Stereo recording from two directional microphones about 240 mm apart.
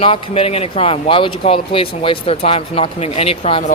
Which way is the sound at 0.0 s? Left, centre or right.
Left.